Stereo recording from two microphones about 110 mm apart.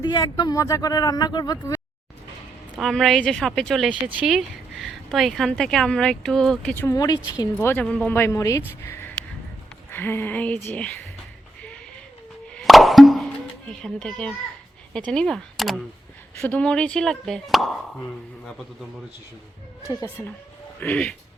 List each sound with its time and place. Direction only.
0.0 s speech: 45° left (ahead or behind)
0.5 s speech: 30° left (ahead or behind)
2.8 s speech: centre (ahead or behind)
3.8 s speech: 10° right (ahead or behind); by 6.7 s 5° left (ahead or behind)
6.7 s speech: 25° left (ahead or behind)
7.6 s speech: 15° left (ahead or behind)
12.5 s plop: centre (ahead or behind)
13.7 s speech: 10° left (ahead or behind)
16.4 s speech: 10° left (ahead or behind)
19.9 s speech: 25° right (ahead or behind)
20.7 s speech: 10° left (ahead or behind)